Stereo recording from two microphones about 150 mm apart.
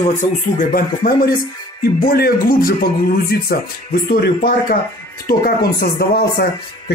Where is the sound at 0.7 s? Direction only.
80° left.